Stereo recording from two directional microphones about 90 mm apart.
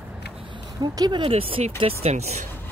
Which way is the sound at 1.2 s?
90° right.